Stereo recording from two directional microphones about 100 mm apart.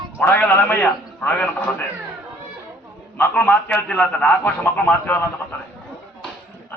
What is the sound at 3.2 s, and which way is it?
A man's voice, 15° left (ahead or behind).